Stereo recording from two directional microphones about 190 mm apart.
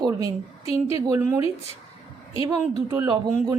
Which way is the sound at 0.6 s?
30° left (ahead or behind).